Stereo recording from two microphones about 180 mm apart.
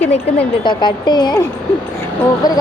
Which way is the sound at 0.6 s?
25° left (ahead or behind).